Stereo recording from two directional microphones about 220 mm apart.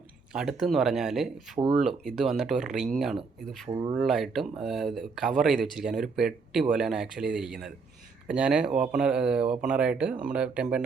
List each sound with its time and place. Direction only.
0.3 s speech: centre (ahead or behind)
3.7 s speech: 20° right (ahead or behind)
3.9 s speech: centre (ahead or behind)